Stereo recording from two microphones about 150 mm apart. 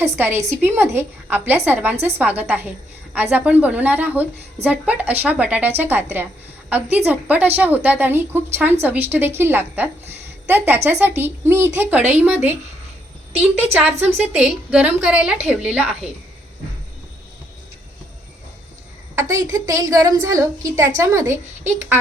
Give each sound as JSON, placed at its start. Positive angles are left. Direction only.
{"t": 0.0, "sound": "a woman's voice", "side_deg": -15}
{"t": 14.0, "sound": "a woman's voice", "side_deg": -10}
{"t": 19.3, "sound": "a woman's voice", "side_deg": -20}